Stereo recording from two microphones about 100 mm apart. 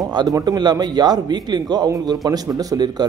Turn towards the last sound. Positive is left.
turn(degrees=-40)  # may be behind; listen again after turning